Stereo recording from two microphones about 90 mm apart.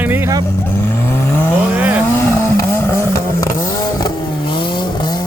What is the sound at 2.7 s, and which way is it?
Vehicle, 30° left (ahead or behind).